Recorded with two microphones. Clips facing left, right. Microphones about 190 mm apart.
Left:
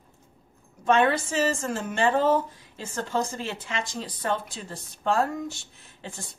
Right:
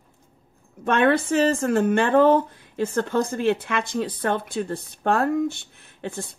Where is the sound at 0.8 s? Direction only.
60° right (ahead or behind).